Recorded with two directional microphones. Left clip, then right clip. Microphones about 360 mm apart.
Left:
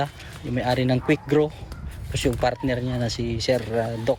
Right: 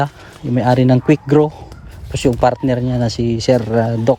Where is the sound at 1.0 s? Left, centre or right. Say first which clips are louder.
Right 8 dB; centre.